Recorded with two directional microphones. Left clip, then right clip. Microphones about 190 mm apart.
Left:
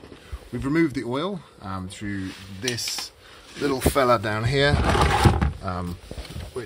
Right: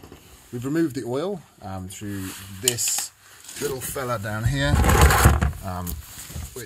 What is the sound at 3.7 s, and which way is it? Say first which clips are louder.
Speech: left 13 dB; 40° left (ahead or behind).